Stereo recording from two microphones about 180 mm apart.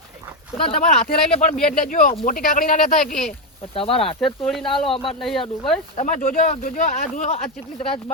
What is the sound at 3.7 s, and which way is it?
Speech, 30° left (ahead or behind).